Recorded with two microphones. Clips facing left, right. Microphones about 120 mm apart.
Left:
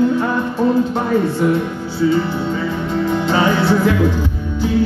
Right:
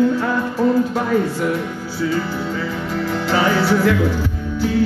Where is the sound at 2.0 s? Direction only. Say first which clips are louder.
Left 5 dB; 25° left (ahead or behind).